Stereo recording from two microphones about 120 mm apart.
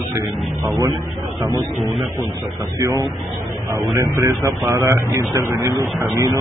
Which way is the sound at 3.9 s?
25° right (ahead or behind).